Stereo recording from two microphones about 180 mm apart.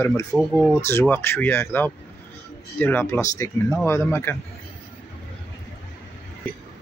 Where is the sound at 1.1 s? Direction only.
15° left (ahead or behind).